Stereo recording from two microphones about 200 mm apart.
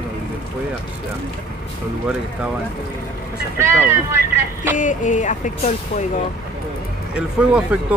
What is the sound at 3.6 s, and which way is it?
Speech, 10° right (ahead or behind).